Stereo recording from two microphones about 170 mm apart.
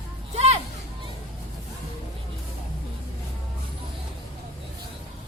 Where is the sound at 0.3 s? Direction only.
40° right (ahead or behind).